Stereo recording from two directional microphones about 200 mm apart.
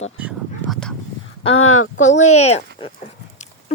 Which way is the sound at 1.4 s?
90° left.